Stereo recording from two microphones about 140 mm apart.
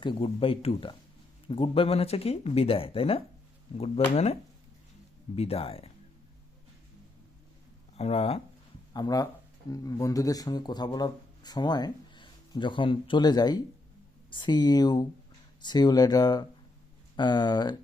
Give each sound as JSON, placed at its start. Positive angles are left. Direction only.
{"t": 0.0, "sound": "speech", "side_deg": 35}
{"t": 7.9, "sound": "speech", "side_deg": 45}
{"t": 8.9, "sound": "speech", "side_deg": 25}